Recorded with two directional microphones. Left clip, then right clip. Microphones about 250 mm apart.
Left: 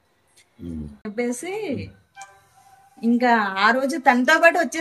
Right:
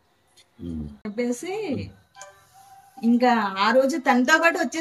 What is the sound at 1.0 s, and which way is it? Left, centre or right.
Speech, centre.